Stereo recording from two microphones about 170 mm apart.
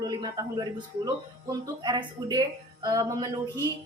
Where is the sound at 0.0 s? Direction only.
25° right (ahead or behind).